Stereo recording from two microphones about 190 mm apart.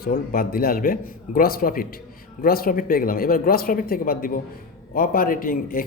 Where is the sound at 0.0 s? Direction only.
50° left (ahead or behind).